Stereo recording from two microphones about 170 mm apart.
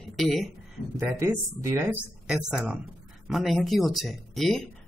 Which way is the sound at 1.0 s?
15° right (ahead or behind).